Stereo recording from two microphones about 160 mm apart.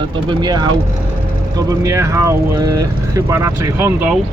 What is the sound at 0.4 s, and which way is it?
Speech, 30° right (ahead or behind).